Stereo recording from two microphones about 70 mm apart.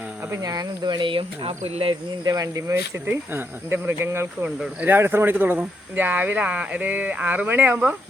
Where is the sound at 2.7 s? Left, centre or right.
Right.